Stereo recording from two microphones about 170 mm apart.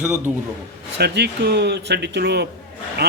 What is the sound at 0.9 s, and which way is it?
A man's voice, 75° right (ahead or behind).